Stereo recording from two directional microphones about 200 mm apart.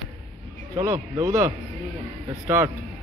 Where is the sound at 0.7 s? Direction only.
20° right (ahead or behind).